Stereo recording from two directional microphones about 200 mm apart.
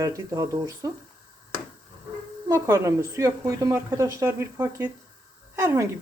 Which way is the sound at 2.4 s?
15° right (ahead or behind).